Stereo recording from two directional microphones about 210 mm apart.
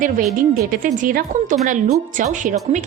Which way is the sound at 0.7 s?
40° right (ahead or behind).